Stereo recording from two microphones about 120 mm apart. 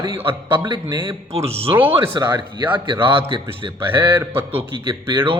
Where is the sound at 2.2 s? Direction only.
35° right (ahead or behind).